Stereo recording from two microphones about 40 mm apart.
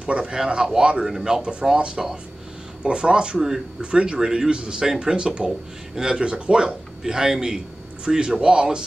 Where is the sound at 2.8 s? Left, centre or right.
Right.